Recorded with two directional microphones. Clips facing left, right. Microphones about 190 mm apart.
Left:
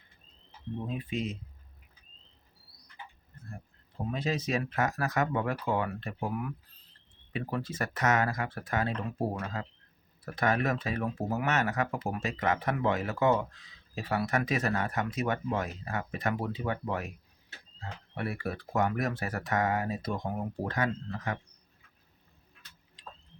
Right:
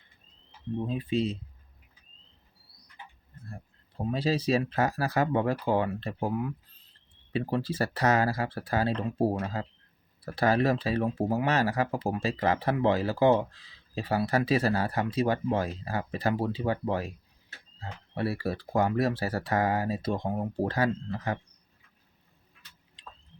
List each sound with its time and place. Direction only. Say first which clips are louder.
0.9 s speech: right 6 dB; 30° right (ahead or behind)
4.1 s speech: right 5 dB; 30° right (ahead or behind)